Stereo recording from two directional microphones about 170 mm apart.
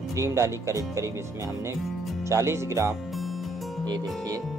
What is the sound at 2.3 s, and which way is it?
Speech, 15° right (ahead or behind).